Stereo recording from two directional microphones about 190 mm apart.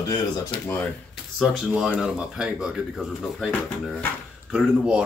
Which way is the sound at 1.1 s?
Centre (ahead or behind).